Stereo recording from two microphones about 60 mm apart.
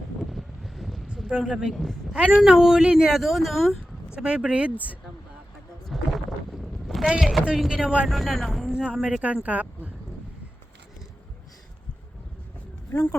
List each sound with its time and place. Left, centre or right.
0.3 s wind noise: centre
1.5 s speech: centre
1.7 s speech: centre
2.3 s speech: centre
4.1 s speech: centre
5.9 s boat: centre
7.2 s speech: centre
7.7 s speech: centre
8.0 s speech: centre
8.7 s speech: centre
12.9 s speech: left